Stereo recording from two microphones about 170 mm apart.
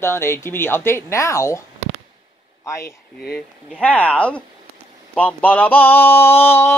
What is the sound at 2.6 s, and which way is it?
Speech, 15° left (ahead or behind).